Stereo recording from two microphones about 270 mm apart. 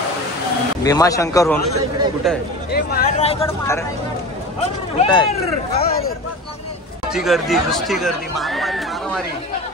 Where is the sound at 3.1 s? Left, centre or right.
Left.